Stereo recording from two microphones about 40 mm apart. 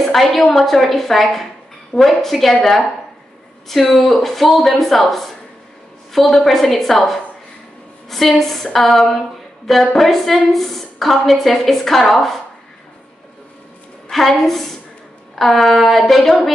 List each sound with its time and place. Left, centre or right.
0.0 s a woman's voice: centre
8.4 s a woman's voice: centre
14.1 s a woman's voice: centre